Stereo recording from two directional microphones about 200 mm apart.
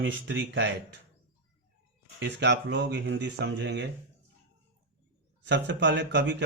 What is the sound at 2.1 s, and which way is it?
Speech, 65° right (ahead or behind).